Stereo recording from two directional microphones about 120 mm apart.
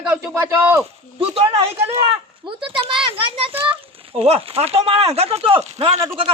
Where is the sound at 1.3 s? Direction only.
50° right (ahead or behind).